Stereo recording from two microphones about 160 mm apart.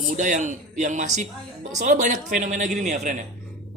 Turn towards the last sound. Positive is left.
turn(degrees=-50)  # may be behind; listen again after turning